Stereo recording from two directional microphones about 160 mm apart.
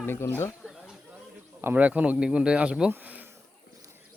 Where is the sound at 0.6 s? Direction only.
Centre (ahead or behind).